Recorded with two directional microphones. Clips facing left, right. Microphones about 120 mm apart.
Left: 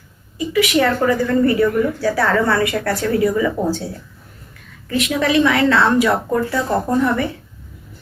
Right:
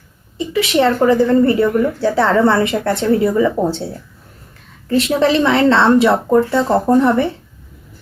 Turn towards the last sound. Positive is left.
turn(degrees=-30)  # may be behind; listen again after turning